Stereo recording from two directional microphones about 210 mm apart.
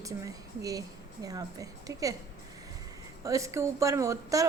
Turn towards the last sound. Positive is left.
turn(degrees=-15)  # may be behind; listen again after turning